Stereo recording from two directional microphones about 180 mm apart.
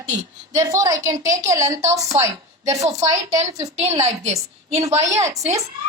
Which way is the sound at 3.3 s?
35° right (ahead or behind).